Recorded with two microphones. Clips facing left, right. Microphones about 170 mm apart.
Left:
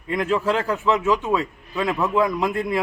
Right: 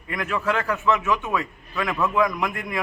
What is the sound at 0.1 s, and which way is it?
A man's voice, 30° left (ahead or behind).